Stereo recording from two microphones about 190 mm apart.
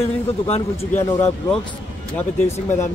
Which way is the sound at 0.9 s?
15° left (ahead or behind).